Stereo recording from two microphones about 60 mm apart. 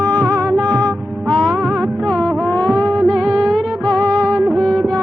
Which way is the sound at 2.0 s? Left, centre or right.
Centre.